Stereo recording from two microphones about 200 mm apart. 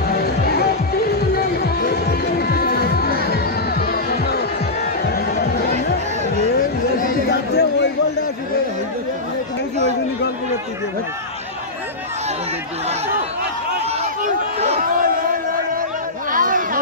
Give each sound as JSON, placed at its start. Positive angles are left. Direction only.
{"t": 0.1, "sound": "music", "side_deg": 50}
{"t": 7.0, "sound": "chatter", "side_deg": 55}
{"t": 14.6, "sound": "crowd", "side_deg": -35}
{"t": 16.3, "sound": "a sound", "side_deg": -45}